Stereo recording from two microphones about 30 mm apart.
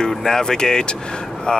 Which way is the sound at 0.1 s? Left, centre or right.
Centre.